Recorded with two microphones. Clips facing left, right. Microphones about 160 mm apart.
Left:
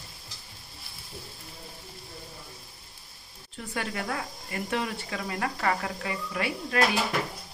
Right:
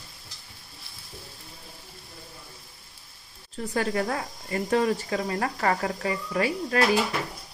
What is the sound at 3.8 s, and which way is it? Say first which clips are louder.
Speech: right 6 dB; 35° right (ahead or behind).